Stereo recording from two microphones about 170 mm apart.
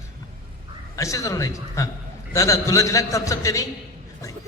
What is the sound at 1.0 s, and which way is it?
A man's voice, 20° left (ahead or behind).